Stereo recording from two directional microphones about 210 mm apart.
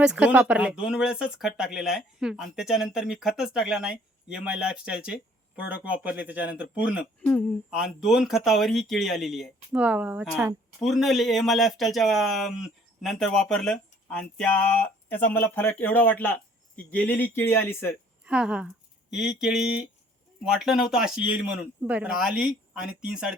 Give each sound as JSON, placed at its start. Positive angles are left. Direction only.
{"t": 0.0, "sound": "speech", "side_deg": -5}
{"t": 10.8, "sound": "speech", "side_deg": 0}
{"t": 18.3, "sound": "speech", "side_deg": -5}